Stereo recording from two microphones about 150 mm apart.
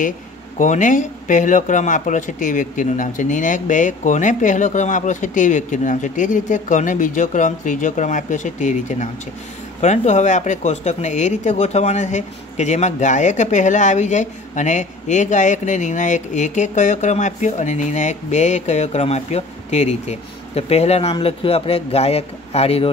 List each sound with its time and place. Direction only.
0.6 s speech: 55° left (ahead or behind); by 22.8 s 40° left (ahead or behind)